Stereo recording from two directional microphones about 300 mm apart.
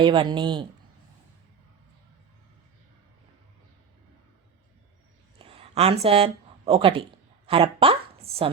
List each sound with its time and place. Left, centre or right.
0.0 s speech: centre
5.4 s a sound: centre
7.4 s a woman's voice: centre